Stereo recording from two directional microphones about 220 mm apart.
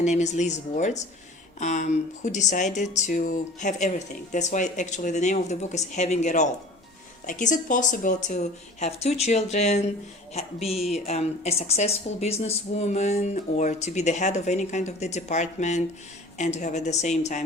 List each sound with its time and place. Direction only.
0.0 s speech: 30° left (ahead or behind)